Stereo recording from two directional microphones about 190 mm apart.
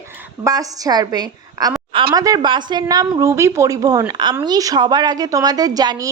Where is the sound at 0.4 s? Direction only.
20° right (ahead or behind).